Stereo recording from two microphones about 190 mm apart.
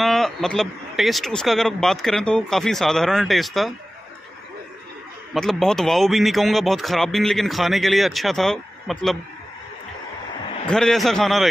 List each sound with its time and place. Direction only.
0.0 s speech: centre (ahead or behind)
5.3 s speech: centre (ahead or behind)
10.7 s speech: 5° left (ahead or behind)